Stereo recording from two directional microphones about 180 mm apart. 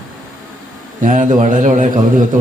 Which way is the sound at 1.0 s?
45° right (ahead or behind).